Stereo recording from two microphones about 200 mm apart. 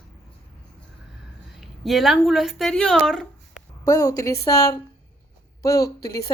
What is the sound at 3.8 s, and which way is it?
Speech, 20° left (ahead or behind).